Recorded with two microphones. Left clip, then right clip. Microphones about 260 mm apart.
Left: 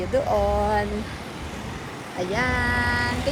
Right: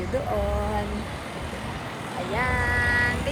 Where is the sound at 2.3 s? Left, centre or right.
Left.